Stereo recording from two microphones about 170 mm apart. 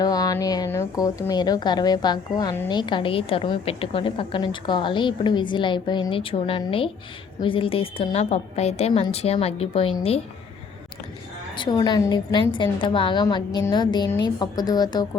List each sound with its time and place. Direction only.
0.0 s a woman's voice: 20° left (ahead or behind)
11.5 s a woman's voice: 25° left (ahead or behind)